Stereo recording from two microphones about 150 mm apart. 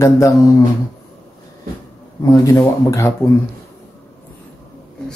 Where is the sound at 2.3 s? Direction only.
20° left (ahead or behind).